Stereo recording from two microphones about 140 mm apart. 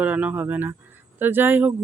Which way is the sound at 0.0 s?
10° right (ahead or behind).